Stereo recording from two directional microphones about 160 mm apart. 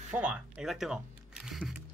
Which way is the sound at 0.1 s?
5° right (ahead or behind).